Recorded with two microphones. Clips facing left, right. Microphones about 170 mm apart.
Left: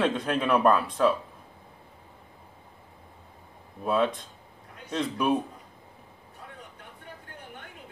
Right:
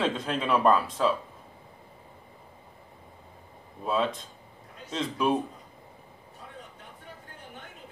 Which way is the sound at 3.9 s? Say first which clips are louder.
Left 2 dB; 60° left (ahead or behind).